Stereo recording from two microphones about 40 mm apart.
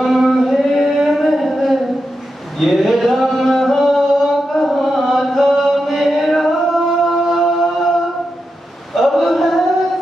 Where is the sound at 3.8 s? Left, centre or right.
Centre.